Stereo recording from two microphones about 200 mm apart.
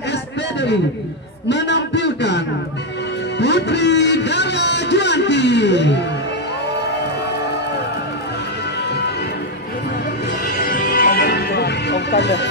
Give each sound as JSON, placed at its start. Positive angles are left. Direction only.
{"t": 0.1, "sound": "a sound", "side_deg": 60}
{"t": 1.5, "sound": "a man's voice", "side_deg": 60}
{"t": 10.4, "sound": "music", "side_deg": 50}